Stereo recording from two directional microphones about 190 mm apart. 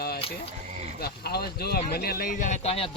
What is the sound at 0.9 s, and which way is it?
Speech, 55° left (ahead or behind).